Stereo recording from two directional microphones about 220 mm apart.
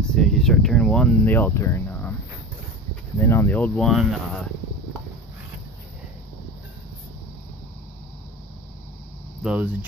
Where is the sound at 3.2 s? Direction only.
10° left (ahead or behind).